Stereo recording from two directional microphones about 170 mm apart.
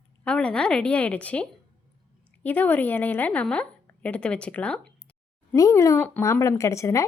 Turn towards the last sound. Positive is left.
turn(degrees=15)  # may be behind; listen again after turning